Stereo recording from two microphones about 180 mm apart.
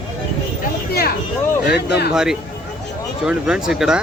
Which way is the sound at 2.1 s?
5° right (ahead or behind).